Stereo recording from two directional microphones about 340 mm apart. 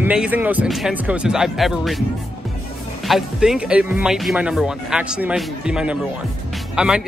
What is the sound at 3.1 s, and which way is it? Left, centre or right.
Speech, centre.